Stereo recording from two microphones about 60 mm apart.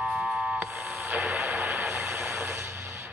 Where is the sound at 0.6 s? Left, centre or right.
Right.